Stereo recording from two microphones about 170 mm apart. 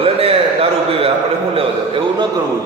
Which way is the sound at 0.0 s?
35° right (ahead or behind).